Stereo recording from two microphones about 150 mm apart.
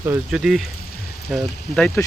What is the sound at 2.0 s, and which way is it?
Speech, 15° left (ahead or behind).